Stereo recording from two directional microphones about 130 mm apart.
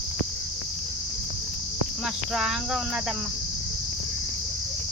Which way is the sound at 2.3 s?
5° right (ahead or behind).